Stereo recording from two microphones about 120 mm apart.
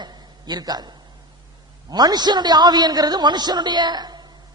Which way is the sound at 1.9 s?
35° right (ahead or behind).